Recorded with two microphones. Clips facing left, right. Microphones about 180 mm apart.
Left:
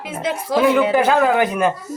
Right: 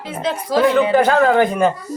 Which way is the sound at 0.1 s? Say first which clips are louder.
Right 1 dB; 10° left (ahead or behind).